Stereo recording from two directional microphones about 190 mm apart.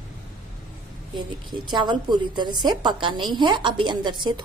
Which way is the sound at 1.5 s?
25° right (ahead or behind).